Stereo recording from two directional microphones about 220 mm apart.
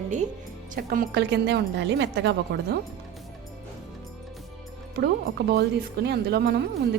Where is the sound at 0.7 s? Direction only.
40° right (ahead or behind).